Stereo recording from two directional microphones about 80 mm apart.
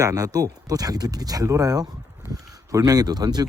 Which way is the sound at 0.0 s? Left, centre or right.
Right.